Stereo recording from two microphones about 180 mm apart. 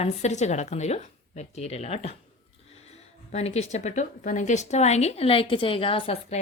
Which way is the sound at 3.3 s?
35° left (ahead or behind).